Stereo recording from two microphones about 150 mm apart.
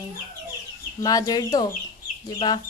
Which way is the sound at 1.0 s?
25° left (ahead or behind).